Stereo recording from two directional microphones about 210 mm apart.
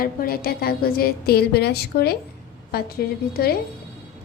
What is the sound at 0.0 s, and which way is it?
A woman's voice, 45° left (ahead or behind).